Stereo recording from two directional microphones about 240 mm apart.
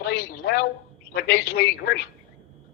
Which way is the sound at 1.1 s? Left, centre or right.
Left.